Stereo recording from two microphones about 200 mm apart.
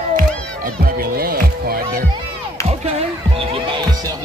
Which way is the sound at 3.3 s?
25° right (ahead or behind).